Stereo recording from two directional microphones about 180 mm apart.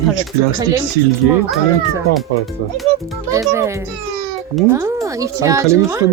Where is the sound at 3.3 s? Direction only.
15° right (ahead or behind).